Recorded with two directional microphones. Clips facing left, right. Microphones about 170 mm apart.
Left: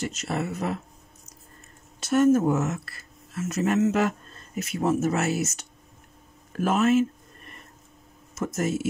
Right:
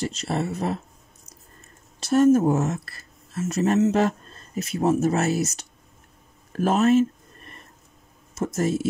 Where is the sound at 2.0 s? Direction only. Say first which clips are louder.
Right 2 dB; 35° right (ahead or behind).